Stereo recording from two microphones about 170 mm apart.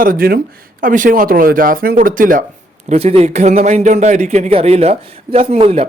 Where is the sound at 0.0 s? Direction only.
55° right (ahead or behind).